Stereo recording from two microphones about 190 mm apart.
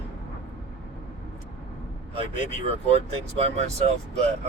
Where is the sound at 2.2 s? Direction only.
30° right (ahead or behind).